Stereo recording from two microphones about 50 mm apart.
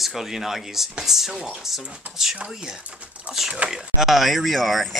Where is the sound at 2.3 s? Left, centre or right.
Right.